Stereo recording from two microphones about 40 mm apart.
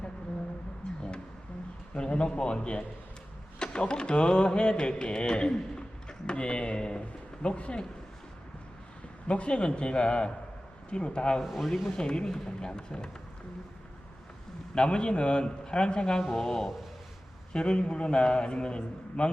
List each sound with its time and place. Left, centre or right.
1.9 s a man's voice: left
3.6 s a sound: left
7.0 s speech: left
9.2 s a man's voice: left
11.4 s speech: centre
11.9 s a man's voice: left
14.8 s a man's voice: left
16.2 s speech: centre
17.5 s a man's voice: left